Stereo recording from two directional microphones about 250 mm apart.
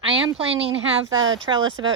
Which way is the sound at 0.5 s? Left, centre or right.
Right.